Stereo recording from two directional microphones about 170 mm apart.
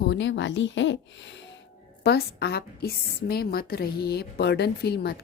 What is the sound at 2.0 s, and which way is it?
A woman's voice, 75° left (ahead or behind).